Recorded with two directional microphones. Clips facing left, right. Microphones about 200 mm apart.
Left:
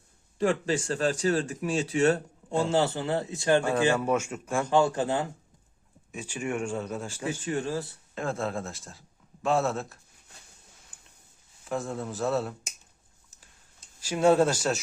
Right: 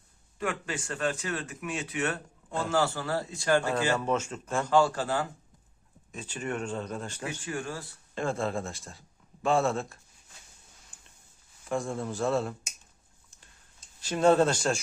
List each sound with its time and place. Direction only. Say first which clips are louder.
0.3 s a man's voice: left 7 dB; 35° left (ahead or behind)
6.1 s speech: left 2 dB; 10° left (ahead or behind)
7.3 s a man's voice: left 7 dB; 25° left (ahead or behind)
8.1 s speech: right 1 dB; centre (ahead or behind)
11.7 s a man's voice: right 1 dB; centre (ahead or behind)
14.0 s speech: left 1 dB; 10° left (ahead or behind)